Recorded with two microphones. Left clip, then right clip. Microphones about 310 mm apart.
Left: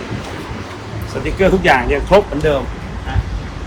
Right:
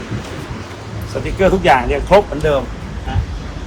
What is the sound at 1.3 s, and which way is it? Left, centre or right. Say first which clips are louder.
Speech: even; centre.